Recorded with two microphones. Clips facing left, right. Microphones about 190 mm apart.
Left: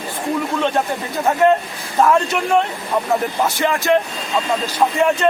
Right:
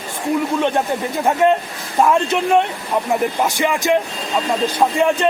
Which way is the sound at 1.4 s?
15° right (ahead or behind).